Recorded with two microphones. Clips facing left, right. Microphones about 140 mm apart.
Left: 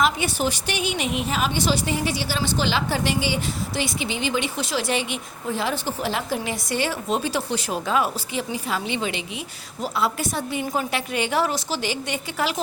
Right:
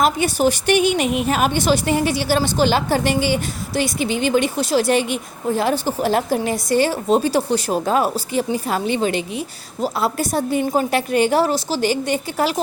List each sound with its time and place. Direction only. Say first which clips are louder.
0.0 s a woman's voice: right 5 dB; 45° right (ahead or behind)